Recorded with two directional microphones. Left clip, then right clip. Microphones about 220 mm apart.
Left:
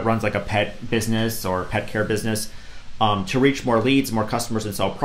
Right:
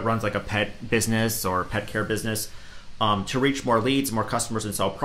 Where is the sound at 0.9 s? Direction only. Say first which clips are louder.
Left 1 dB; 15° right (ahead or behind).